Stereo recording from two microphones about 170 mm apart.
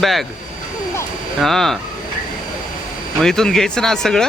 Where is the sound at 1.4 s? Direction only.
Centre (ahead or behind).